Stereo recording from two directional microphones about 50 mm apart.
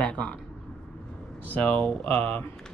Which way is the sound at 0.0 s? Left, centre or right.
Left.